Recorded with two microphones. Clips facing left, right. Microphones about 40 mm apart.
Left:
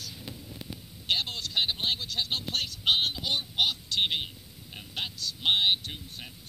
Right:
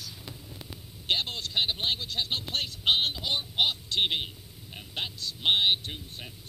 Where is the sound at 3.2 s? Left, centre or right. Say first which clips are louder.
Right 1 dB; centre.